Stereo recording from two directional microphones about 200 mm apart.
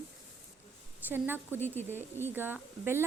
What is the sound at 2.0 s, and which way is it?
A woman's voice, 10° right (ahead or behind).